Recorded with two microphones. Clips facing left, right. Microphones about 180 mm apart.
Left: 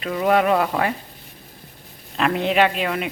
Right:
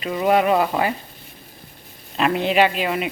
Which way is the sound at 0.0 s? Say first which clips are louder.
Even; 5° right (ahead or behind).